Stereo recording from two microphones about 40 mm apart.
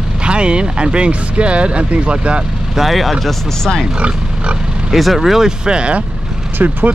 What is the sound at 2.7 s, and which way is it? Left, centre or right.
Speech, centre.